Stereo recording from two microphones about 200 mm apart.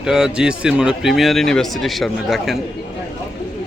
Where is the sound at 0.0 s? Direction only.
5° right (ahead or behind).